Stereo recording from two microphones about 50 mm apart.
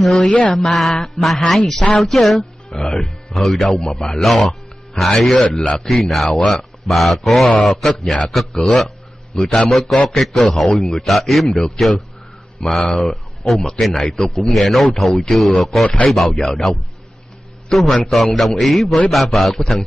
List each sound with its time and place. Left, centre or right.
0.0 s a man's voice: centre
5.6 s a man's voice: centre
6.0 s speech: centre
11.5 s a man's voice: centre
12.5 s a man's voice: centre